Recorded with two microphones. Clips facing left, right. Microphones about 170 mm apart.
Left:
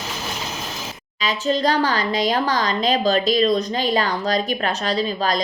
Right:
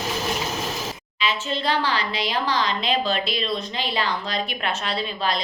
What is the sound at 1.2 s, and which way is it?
A woman's voice, 40° left (ahead or behind).